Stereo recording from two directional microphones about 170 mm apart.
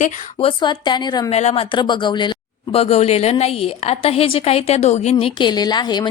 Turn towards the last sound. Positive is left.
turn(degrees=25)  # may be behind; listen again after turning